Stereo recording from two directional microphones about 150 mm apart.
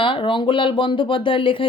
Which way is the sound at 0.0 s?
35° left (ahead or behind).